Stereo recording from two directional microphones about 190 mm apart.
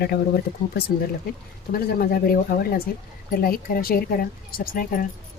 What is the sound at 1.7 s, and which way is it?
Speech, 50° left (ahead or behind).